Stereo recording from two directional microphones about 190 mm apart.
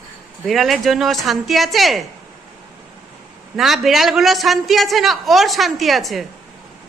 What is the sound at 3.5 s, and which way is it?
A man's voice, centre (ahead or behind).